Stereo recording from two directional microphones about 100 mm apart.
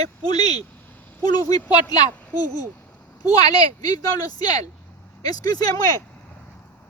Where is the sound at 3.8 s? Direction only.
40° left (ahead or behind).